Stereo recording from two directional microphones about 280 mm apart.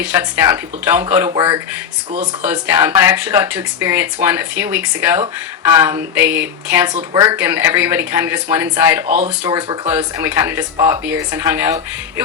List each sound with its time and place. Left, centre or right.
0.0 s speech: centre
1.3 s speech: centre
2.4 s speech: centre
9.0 s speech: right
9.4 s speech: centre